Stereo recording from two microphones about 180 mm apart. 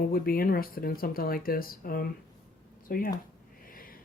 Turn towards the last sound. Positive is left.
turn(degrees=55)  # may be behind; listen again after turning